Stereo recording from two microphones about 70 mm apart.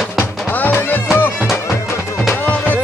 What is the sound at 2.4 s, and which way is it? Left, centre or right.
Music, left.